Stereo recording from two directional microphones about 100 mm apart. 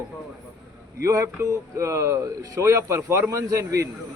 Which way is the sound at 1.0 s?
30° right (ahead or behind).